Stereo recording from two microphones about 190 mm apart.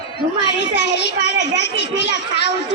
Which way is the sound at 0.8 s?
65° left (ahead or behind).